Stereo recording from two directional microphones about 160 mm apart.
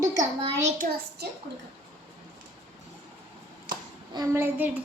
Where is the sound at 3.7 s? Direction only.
25° right (ahead or behind).